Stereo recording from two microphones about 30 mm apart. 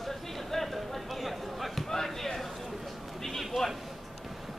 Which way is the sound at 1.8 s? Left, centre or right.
Centre.